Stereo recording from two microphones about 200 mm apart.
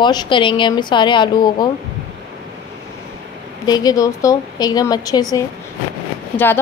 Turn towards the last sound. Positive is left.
turn(degrees=10)  # may be behind; listen again after turning